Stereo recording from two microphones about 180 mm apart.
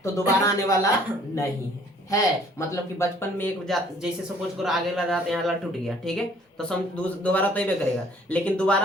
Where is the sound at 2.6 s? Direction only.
15° left (ahead or behind).